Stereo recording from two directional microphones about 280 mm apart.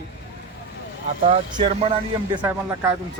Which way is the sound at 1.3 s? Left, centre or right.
Right.